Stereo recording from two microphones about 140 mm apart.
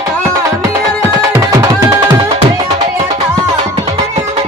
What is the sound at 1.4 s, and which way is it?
Music, 25° right (ahead or behind).